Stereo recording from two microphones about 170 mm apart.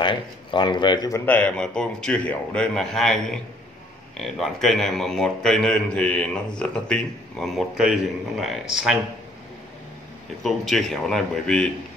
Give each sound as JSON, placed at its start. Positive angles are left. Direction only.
{"t": 0.0, "sound": "a man's voice", "side_deg": 30}
{"t": 1.2, "sound": "a man's voice", "side_deg": 10}
{"t": 10.4, "sound": "a man's voice", "side_deg": 0}